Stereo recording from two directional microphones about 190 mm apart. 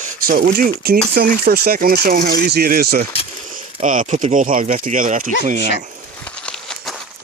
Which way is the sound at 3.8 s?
45° right (ahead or behind).